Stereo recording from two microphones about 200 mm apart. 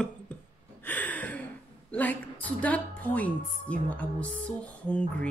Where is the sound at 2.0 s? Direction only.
5° left (ahead or behind).